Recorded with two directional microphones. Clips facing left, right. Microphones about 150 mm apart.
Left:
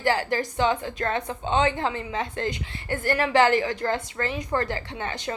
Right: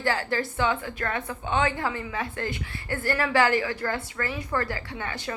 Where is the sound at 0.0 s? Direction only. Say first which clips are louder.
Left 3 dB; 15° left (ahead or behind).